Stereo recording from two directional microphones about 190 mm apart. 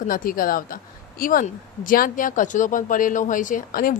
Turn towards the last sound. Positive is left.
turn(degrees=50)  # may be behind; listen again after turning